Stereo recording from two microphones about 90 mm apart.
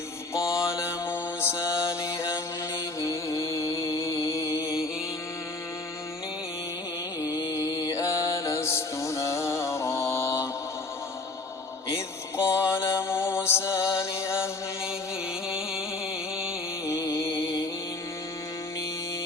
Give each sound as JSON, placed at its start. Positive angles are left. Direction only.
{"t": 0.3, "sound": "mantra", "side_deg": 30}
{"t": 7.2, "sound": "music", "side_deg": 35}
{"t": 12.5, "sound": "music", "side_deg": 30}
{"t": 15.4, "sound": "a sound", "side_deg": -5}
{"t": 16.8, "sound": "music", "side_deg": 35}